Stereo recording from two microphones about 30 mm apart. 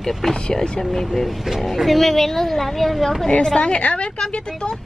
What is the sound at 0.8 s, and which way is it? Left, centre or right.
A woman's voice, centre.